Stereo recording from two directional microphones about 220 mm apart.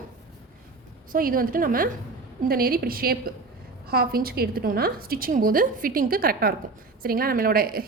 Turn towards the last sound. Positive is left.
turn(degrees=-40)  # may be behind; listen again after turning